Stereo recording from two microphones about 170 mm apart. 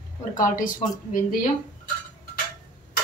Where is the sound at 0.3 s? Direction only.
50° left (ahead or behind).